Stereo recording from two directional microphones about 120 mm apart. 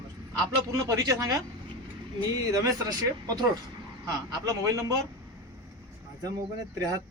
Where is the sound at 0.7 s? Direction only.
25° right (ahead or behind).